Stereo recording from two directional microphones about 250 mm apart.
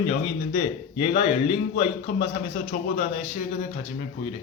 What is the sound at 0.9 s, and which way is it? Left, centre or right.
A man's voice, left.